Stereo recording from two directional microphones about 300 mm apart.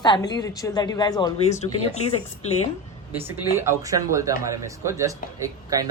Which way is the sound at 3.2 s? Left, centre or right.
Centre.